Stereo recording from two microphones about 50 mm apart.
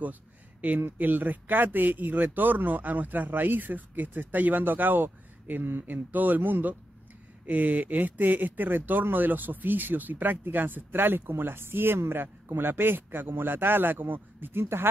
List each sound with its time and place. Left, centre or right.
0.0 s speech: right
14.6 s speech: right